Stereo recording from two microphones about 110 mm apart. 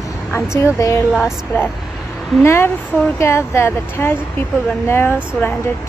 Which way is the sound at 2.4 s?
25° left (ahead or behind).